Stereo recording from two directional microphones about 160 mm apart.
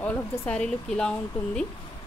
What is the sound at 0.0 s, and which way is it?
Speech, 10° left (ahead or behind).